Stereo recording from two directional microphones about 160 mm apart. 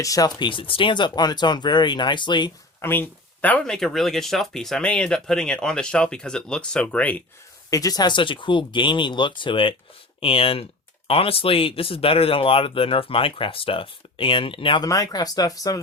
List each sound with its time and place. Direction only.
0.0 s speech: 20° left (ahead or behind)
2.8 s speech: 10° left (ahead or behind)
7.7 s speech: 20° left (ahead or behind)